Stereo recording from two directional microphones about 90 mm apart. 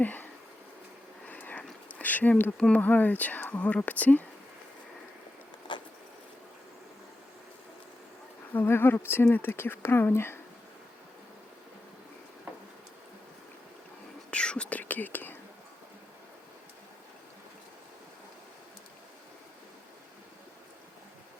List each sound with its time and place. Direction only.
0.0 s bee: 20° left (ahead or behind)
1.3 s a sound: 20° left (ahead or behind)
1.9 s speech: 20° left (ahead or behind)
5.7 s vehicle: 60° left (ahead or behind)
8.5 s speech: 25° left (ahead or behind)
14.3 s whispering: 10° left (ahead or behind)